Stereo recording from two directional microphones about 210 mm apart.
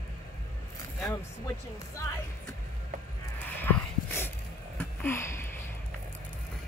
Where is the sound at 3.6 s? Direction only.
10° left (ahead or behind).